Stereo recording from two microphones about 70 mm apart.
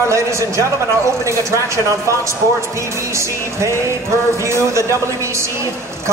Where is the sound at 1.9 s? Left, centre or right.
Right.